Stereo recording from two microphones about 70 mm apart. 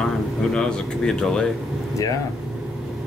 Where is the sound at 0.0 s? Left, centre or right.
Centre.